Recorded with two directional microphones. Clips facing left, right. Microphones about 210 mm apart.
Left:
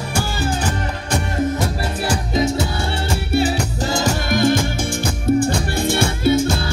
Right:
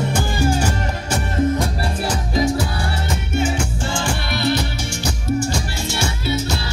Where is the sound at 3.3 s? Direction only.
35° left (ahead or behind).